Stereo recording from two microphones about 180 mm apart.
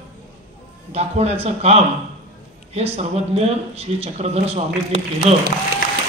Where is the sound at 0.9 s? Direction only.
35° right (ahead or behind).